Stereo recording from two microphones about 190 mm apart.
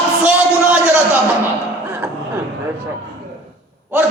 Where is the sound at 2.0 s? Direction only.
10° right (ahead or behind).